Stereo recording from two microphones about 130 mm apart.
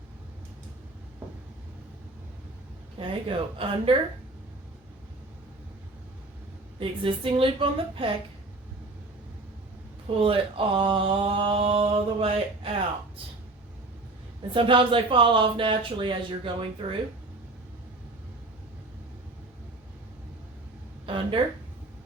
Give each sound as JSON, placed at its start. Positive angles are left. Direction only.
{"t": 3.1, "sound": "mantra", "side_deg": -45}
{"t": 6.7, "sound": "mantra", "side_deg": -40}
{"t": 10.2, "sound": "mantra", "side_deg": -45}
{"t": 14.5, "sound": "speech", "side_deg": -40}
{"t": 21.1, "sound": "mantra", "side_deg": -45}